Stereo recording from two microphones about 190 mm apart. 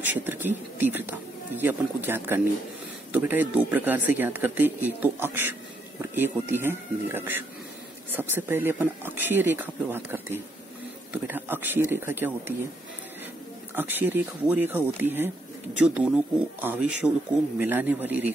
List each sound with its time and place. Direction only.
0.0 s speech: 10° right (ahead or behind)
13.7 s speech: 10° right (ahead or behind)